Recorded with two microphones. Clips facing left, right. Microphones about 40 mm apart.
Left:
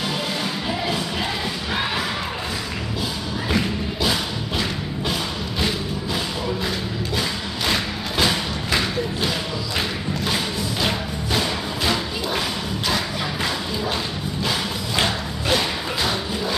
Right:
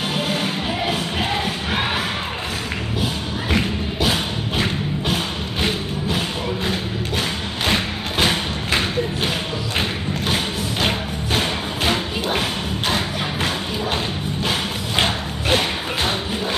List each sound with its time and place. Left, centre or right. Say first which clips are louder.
0.1 s music: right 3 dB; right
1.7 s crowd: right 1 dB; right
3.5 s music: right 2 dB; right